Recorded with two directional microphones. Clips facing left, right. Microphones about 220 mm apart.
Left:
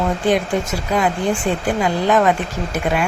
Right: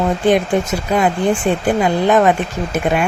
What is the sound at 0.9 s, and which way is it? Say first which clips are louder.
Speech: right 3 dB; 25° right (ahead or behind).